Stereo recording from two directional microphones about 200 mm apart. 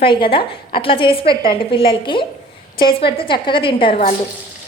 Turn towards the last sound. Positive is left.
turn(degrees=25)  # may be behind; listen again after turning